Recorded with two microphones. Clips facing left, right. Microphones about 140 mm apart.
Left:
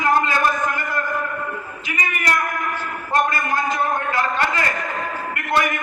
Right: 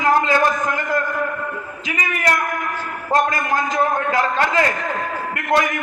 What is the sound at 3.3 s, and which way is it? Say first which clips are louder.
A man's voice: right 1 dB; 90° right.